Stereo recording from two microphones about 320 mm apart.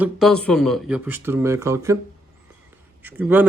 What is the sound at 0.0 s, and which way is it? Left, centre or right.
Speech, centre.